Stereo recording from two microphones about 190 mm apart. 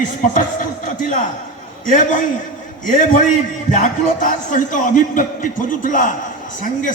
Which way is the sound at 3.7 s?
40° left (ahead or behind).